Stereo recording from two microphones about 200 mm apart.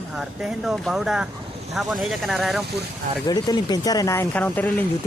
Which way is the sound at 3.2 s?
20° left (ahead or behind).